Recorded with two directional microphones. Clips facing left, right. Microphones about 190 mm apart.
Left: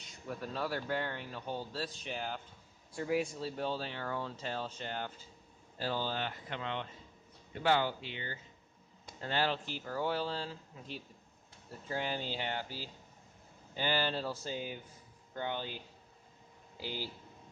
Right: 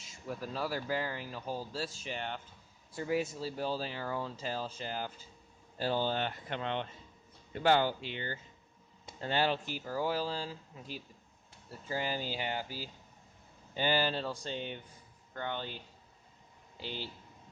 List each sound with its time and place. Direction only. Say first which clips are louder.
0.1 s speech: right 1 dB; 5° right (ahead or behind)
5.8 s speech: right 4 dB; 25° right (ahead or behind)
6.1 s speech: right 3 dB; 50° right (ahead or behind)
7.6 s speech: right 3 dB; 35° right (ahead or behind)
9.0 s speech: right 2 dB; 20° right (ahead or behind)
14.1 s speech: right 1 dB; 5° left (ahead or behind)